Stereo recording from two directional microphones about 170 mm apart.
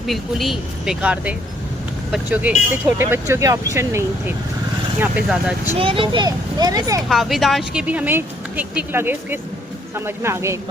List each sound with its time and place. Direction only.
0.1 s speech: centre (ahead or behind)
3.0 s speech: 15° right (ahead or behind)
4.9 s speech: 5° right (ahead or behind)
5.7 s speech: 30° right (ahead or behind)
7.1 s speech: centre (ahead or behind)